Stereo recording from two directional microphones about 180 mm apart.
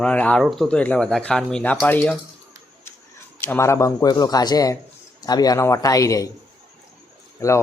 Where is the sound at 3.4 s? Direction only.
10° left (ahead or behind).